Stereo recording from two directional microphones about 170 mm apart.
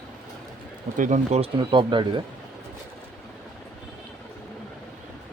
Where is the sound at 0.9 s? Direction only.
45° right (ahead or behind); by 2.2 s 30° right (ahead or behind).